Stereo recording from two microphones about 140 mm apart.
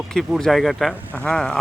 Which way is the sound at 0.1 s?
5° left (ahead or behind).